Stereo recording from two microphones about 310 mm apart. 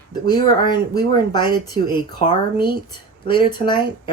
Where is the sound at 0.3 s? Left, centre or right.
Centre.